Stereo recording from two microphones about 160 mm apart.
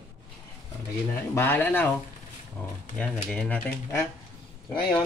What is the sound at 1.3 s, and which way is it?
Speech, 15° left (ahead or behind).